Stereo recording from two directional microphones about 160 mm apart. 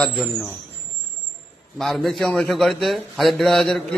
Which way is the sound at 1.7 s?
Centre (ahead or behind).